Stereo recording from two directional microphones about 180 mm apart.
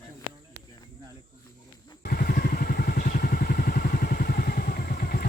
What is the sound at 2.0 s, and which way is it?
Vehicle, 55° left (ahead or behind).